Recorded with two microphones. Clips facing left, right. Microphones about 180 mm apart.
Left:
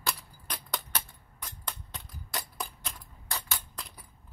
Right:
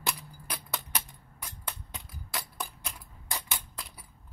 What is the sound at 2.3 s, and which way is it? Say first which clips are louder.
Music: even; 5° right (ahead or behind).